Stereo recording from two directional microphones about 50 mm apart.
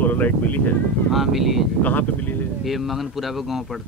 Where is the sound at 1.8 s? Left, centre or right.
Left.